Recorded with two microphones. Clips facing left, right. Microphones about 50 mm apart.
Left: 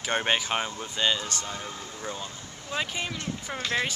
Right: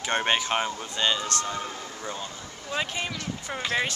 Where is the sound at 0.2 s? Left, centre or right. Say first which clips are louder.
Right 2 dB; centre.